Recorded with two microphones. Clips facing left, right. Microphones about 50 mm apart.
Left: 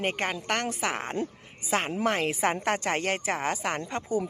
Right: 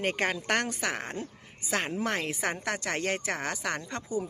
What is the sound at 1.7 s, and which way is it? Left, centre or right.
Speech, centre.